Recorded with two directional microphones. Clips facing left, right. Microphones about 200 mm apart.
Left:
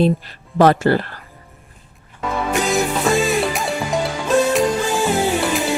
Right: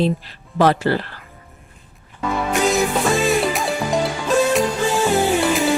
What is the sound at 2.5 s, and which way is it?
Music, centre (ahead or behind).